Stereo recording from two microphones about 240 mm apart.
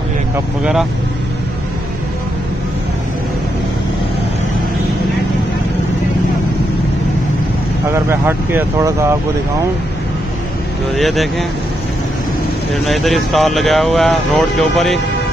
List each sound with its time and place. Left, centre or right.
7.9 s speech: centre
11.0 s speech: centre
12.7 s speech: centre